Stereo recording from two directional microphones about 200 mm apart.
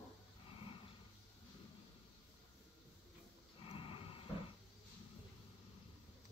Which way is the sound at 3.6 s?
25° left (ahead or behind).